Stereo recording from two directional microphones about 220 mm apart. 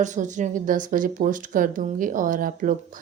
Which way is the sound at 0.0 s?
35° right (ahead or behind).